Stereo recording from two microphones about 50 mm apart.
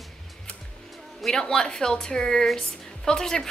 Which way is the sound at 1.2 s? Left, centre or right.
Centre.